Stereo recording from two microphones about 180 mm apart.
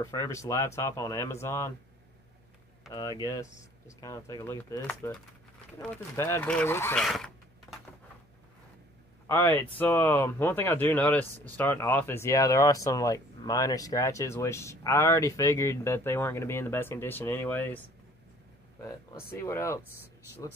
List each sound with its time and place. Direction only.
0.0 s speech: 15° left (ahead or behind)
2.9 s speech: 20° left (ahead or behind)
7.0 s a sound: centre (ahead or behind)
9.3 s speech: 15° left (ahead or behind)